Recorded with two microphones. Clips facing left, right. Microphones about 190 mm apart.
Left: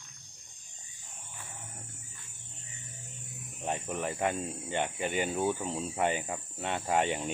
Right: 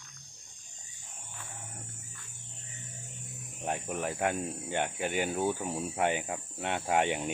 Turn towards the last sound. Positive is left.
turn(degrees=-10)  # may be behind; listen again after turning